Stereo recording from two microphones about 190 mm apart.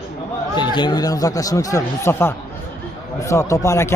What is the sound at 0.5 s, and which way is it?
A man's voice, 25° left (ahead or behind).